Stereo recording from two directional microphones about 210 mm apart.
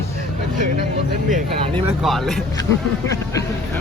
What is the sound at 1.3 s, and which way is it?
Speech, 40° right (ahead or behind).